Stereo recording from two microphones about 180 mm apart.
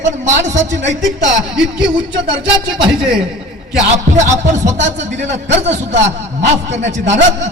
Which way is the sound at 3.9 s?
40° right (ahead or behind).